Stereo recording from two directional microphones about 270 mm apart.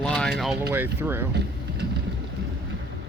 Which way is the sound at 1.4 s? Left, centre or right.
Right.